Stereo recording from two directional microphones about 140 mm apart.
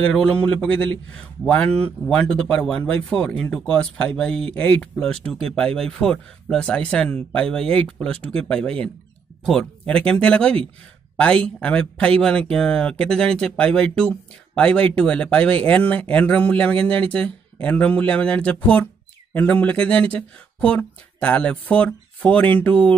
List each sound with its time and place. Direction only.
0.0 s speech: 5° left (ahead or behind)